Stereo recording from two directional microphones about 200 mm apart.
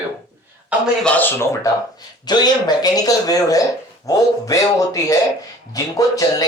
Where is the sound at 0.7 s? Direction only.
5° right (ahead or behind).